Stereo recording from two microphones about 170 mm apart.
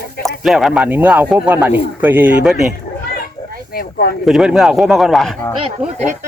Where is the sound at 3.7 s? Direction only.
65° left (ahead or behind).